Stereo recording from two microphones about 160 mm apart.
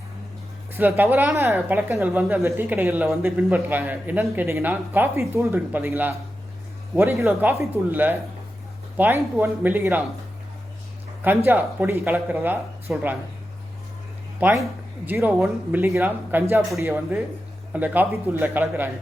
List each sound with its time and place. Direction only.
0.7 s speech: 15° right (ahead or behind)
11.2 s speech: 15° right (ahead or behind)
14.4 s speech: 10° right (ahead or behind)